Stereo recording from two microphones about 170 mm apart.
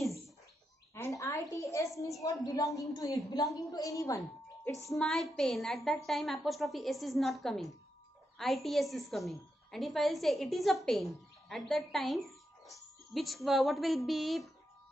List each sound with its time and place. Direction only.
0.9 s a sound: 15° left (ahead or behind)
2.4 s a woman's voice: 20° left (ahead or behind)
4.8 s a woman's voice: centre (ahead or behind)